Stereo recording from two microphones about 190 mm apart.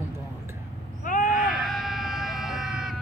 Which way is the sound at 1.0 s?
45° left (ahead or behind).